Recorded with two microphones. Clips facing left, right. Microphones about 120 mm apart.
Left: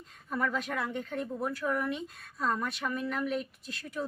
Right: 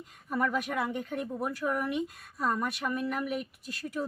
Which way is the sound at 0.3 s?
10° right (ahead or behind).